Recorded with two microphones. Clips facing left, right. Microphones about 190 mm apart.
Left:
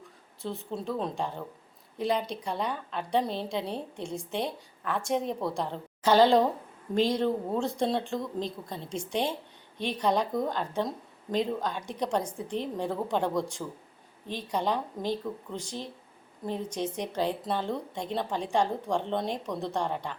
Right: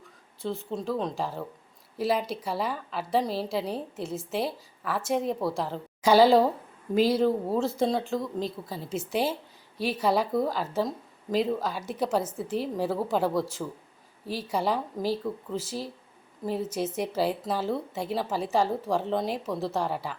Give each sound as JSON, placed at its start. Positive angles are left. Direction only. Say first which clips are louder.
{"t": 0.0, "sound": "a woman's voice", "louder": "right 3 dB", "side_deg": 0}